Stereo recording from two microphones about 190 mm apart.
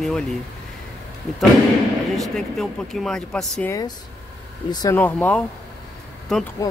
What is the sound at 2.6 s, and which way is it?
Speech, centre (ahead or behind).